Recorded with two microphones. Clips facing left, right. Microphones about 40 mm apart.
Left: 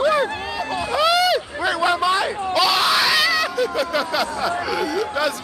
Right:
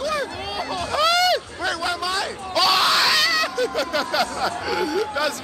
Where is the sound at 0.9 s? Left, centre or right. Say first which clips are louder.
Left 1 dB; centre.